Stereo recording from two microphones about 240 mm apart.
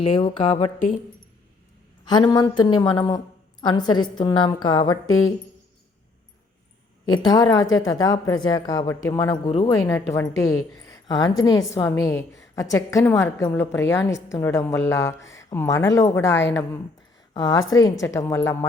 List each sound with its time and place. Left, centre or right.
0.0 s speech: left
2.3 s a woman's voice: centre
5.0 s speech: left
7.3 s a woman's voice: centre
7.7 s speech: left
7.9 s a woman's voice: centre
17.5 s a woman's voice: left
18.0 s a woman's voice: centre